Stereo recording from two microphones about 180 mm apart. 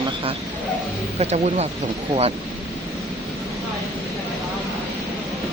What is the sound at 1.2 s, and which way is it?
Speech, 40° right (ahead or behind).